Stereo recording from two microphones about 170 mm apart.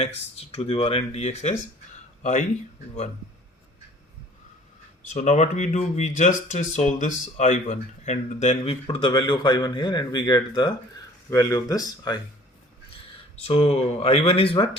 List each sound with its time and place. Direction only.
0.0 s speech: 35° left (ahead or behind)
5.1 s speech: 40° left (ahead or behind); by 12.2 s 20° left (ahead or behind)
13.4 s speech: 35° left (ahead or behind)